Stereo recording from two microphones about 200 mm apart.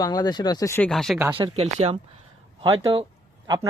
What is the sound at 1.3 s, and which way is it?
Speech, 30° right (ahead or behind).